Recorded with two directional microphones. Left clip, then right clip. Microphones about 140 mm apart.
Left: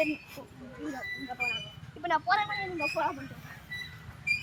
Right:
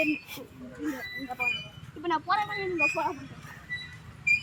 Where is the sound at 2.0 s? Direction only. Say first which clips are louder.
Even; 30° left (ahead or behind).